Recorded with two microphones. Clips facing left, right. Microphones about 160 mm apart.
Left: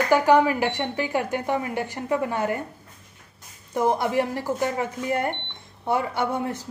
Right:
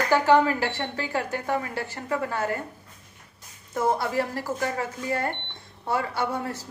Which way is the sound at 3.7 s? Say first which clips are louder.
Left 3 dB; 15° left (ahead or behind).